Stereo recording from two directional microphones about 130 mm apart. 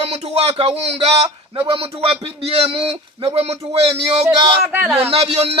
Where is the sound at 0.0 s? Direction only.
55° right (ahead or behind).